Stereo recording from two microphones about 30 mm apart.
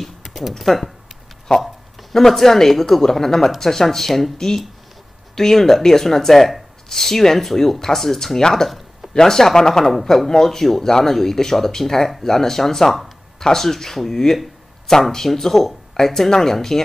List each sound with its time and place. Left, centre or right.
0.0 s speech: centre
1.5 s speech: left
2.1 s speech: centre
8.4 s speech: centre
8.6 s a sound: centre
9.1 s speech: centre